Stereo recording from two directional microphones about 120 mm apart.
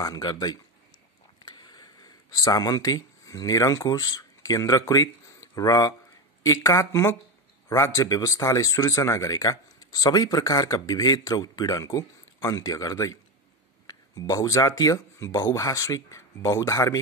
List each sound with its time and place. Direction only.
0.0 s speech: 35° left (ahead or behind)